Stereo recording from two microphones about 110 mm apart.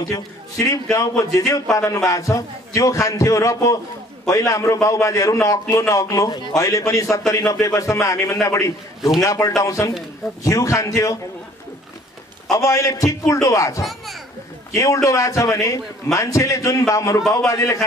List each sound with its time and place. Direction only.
0.0 s a man's voice: 30° left (ahead or behind)
12.4 s a man's voice: 30° left (ahead or behind)